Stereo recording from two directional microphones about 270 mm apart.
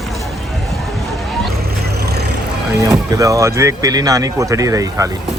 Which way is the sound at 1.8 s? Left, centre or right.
Right.